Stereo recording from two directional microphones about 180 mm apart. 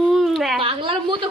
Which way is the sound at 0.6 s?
30° right (ahead or behind).